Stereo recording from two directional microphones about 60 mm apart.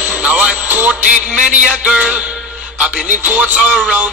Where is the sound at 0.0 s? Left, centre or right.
Right.